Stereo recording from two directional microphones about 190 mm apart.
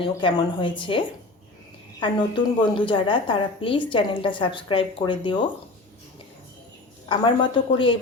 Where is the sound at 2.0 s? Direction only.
25° left (ahead or behind).